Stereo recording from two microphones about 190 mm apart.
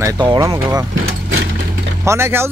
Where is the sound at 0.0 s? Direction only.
20° right (ahead or behind).